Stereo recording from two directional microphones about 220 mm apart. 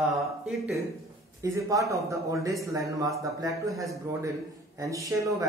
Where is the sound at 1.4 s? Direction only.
15° right (ahead or behind).